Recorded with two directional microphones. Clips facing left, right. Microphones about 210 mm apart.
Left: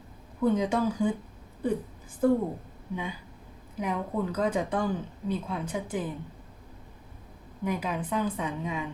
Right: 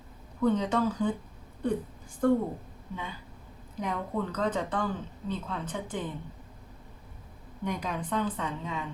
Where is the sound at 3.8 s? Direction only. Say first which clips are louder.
Left 2 dB; 10° left (ahead or behind).